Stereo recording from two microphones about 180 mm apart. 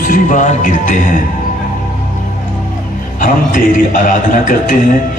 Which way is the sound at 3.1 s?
50° left (ahead or behind).